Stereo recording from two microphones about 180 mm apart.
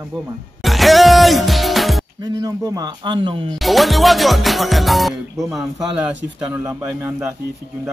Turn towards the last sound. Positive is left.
turn(degrees=-10)  # may be behind; listen again after turning